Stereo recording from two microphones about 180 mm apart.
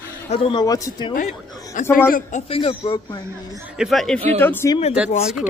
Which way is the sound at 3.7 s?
Centre (ahead or behind).